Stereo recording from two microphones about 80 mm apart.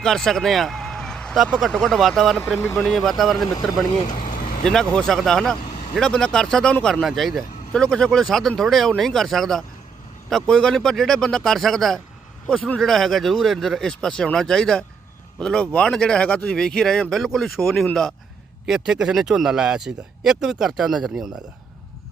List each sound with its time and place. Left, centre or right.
0.0 s vehicle: centre
1.5 s speech: centre